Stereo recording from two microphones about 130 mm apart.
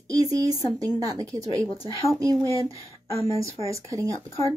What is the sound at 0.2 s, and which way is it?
Speech, 30° right (ahead or behind).